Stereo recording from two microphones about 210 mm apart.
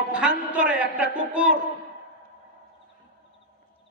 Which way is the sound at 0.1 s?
5° right (ahead or behind).